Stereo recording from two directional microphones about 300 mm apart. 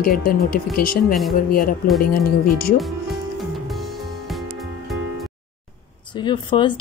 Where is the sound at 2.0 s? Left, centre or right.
Left.